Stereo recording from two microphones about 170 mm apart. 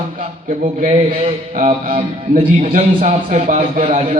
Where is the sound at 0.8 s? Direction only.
35° right (ahead or behind).